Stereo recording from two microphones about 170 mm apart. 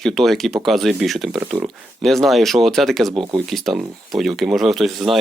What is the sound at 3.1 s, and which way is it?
Speech, 30° right (ahead or behind).